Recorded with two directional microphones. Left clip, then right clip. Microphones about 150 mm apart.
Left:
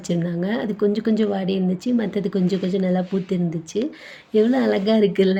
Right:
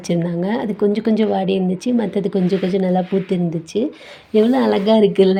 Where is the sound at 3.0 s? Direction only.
50° right (ahead or behind).